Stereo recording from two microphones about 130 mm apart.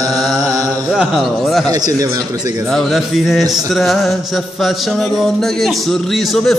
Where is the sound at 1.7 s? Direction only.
30° right (ahead or behind).